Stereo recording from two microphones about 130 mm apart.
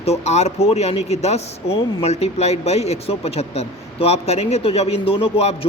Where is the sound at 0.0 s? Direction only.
55° left (ahead or behind).